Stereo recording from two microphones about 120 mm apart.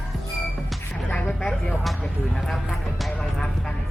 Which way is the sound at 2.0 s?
5° left (ahead or behind).